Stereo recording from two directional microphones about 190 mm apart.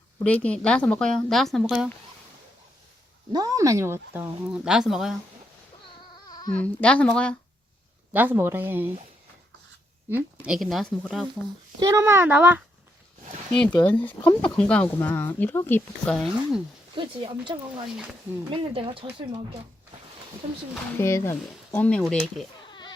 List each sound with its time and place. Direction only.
0.2 s speech: 5° left (ahead or behind)
3.3 s speech: 20° right (ahead or behind); by 5.1 s centre (ahead or behind)
6.2 s a sound: 20° left (ahead or behind)
6.5 s speech: 5° left (ahead or behind)
8.1 s speech: 10° right (ahead or behind)
10.4 s speech: centre (ahead or behind)
11.8 s speech: 15° right (ahead or behind)
13.5 s speech: 5° left (ahead or behind)
17.0 s speech: 25° right (ahead or behind)
17.8 s speech: centre (ahead or behind)
18.5 s speech: 30° right (ahead or behind)
21.0 s speech: 15° left (ahead or behind)